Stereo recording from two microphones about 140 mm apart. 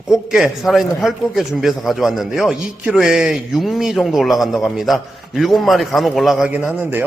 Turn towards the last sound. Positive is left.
turn(degrees=-15)  # may be behind; listen again after turning